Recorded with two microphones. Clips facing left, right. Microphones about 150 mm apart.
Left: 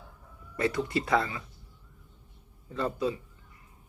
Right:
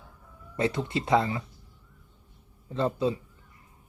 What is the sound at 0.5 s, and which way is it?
Speech, 25° right (ahead or behind).